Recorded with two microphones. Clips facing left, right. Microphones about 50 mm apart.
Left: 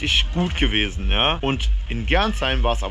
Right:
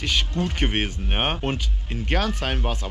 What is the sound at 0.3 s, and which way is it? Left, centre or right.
Speech, left.